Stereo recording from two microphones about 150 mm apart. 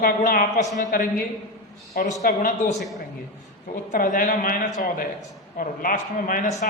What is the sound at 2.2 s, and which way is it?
Speech, 65° left (ahead or behind).